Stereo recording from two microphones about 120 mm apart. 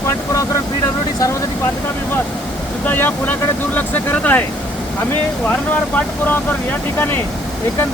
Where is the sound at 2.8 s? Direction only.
15° left (ahead or behind).